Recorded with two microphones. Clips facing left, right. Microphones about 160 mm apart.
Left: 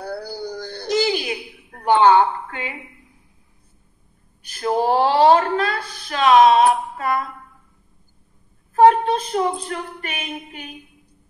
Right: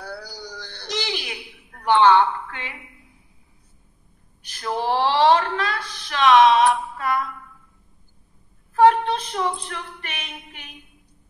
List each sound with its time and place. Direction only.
0.0 s a sound: 50° left (ahead or behind)
1.9 s a woman's voice: 40° left (ahead or behind)
4.6 s speech: 45° left (ahead or behind)
8.8 s speech: 40° left (ahead or behind)